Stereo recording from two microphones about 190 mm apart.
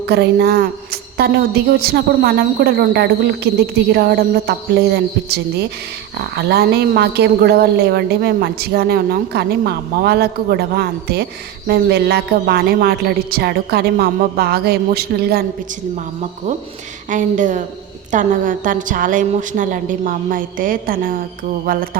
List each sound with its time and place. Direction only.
0.1 s a woman's voice: 60° right (ahead or behind)
17.1 s a woman's voice: 40° right (ahead or behind)